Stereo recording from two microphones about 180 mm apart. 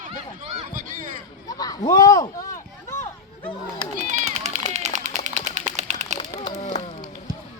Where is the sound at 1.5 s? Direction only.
20° left (ahead or behind).